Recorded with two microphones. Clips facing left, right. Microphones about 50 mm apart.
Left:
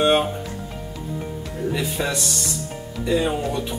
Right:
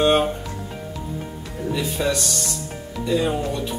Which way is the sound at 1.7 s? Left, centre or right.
Centre.